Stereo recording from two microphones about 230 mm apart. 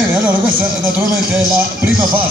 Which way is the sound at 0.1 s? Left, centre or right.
Centre.